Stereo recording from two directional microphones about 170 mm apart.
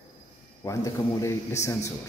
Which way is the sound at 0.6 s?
20° left (ahead or behind).